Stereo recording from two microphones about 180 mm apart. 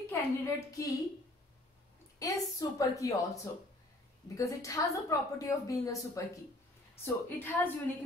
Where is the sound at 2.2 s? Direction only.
20° left (ahead or behind).